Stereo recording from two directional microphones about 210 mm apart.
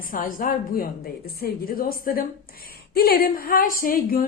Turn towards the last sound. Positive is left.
turn(degrees=45)  # may be behind; listen again after turning